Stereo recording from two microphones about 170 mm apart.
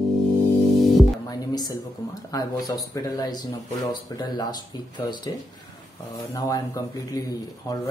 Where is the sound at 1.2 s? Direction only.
20° left (ahead or behind).